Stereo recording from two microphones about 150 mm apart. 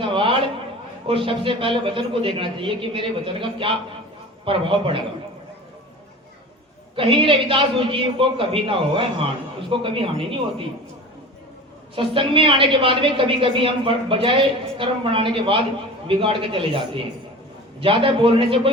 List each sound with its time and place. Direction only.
0.0 s a sound: 35° right (ahead or behind)
1.0 s a woman's voice: 35° right (ahead or behind)
6.9 s a woman's voice: 35° right (ahead or behind)
11.9 s a woman's voice: 35° right (ahead or behind)